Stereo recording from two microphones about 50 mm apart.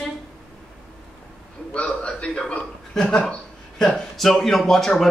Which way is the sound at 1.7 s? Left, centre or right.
Left.